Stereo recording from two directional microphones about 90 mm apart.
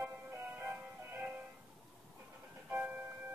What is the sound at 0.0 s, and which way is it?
Music, 30° right (ahead or behind).